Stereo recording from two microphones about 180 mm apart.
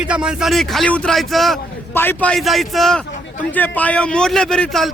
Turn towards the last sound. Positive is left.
turn(degrees=0)  # may be behind; listen again after turning